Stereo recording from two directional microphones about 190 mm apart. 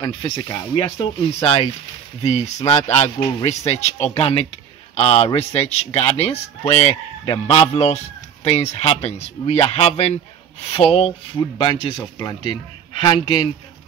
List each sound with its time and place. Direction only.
0.0 s speech: 20° left (ahead or behind)